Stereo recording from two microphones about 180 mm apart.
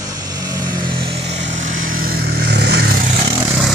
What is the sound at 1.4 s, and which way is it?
Vehicle, 45° right (ahead or behind).